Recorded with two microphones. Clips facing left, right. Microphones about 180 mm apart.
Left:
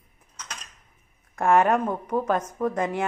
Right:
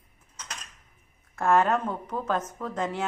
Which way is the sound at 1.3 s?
15° left (ahead or behind).